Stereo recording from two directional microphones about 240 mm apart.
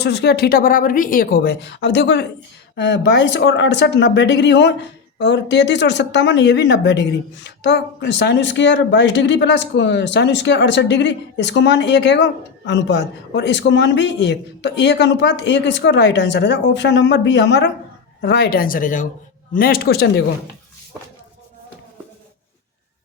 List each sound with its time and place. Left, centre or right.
0.0 s a woman's voice: left